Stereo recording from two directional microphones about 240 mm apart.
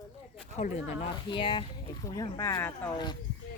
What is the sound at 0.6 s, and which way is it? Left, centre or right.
Speech, left.